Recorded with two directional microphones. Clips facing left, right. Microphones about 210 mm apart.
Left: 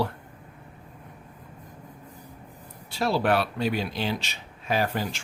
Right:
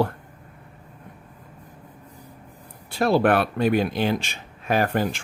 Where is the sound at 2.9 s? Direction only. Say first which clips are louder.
Right 5 dB; 55° right (ahead or behind).